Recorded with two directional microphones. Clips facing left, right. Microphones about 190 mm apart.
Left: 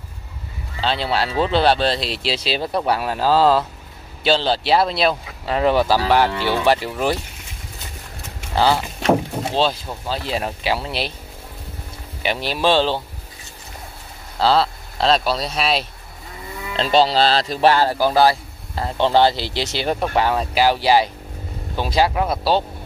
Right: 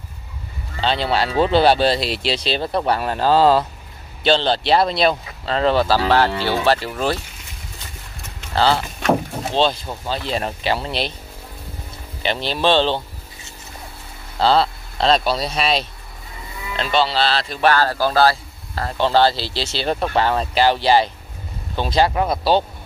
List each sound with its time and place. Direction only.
0.7 s a man's voice: centre (ahead or behind)
8.5 s a man's voice: 15° left (ahead or behind)
12.2 s a man's voice: 10° left (ahead or behind)
14.4 s speech: 5° left (ahead or behind)
16.7 s speech: 35° left (ahead or behind)
17.6 s a man's voice: 20° left (ahead or behind); by 22.6 s centre (ahead or behind)